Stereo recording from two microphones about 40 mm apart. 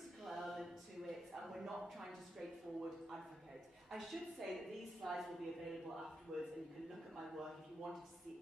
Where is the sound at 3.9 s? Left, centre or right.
Centre.